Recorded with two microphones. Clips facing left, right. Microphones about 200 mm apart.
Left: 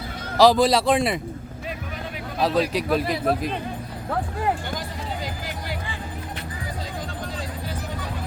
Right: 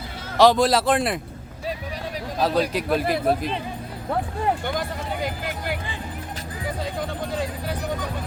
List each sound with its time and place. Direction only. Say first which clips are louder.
0.3 s a man's voice: even; centre (ahead or behind)
2.4 s a man's voice: even; centre (ahead or behind)
4.8 s music: right 4 dB; 55° right (ahead or behind)